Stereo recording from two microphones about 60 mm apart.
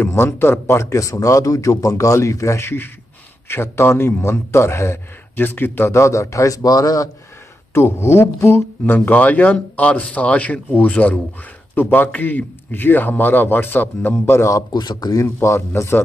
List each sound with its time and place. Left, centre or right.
0.0 s a man's voice: left
0.8 s a man's voice: left
5.3 s a man's voice: left
5.9 s a man's voice: left
7.7 s a man's voice: left
14.5 s speech: left
15.4 s a man's voice: left